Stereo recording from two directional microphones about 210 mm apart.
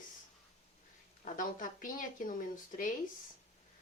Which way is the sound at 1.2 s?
40° left (ahead or behind).